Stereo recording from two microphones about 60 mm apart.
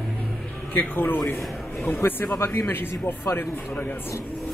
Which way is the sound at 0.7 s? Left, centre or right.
Left.